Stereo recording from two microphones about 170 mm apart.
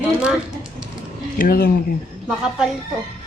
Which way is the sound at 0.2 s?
5° right (ahead or behind).